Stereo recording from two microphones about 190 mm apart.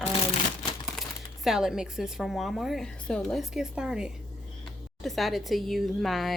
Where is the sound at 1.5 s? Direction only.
Centre (ahead or behind).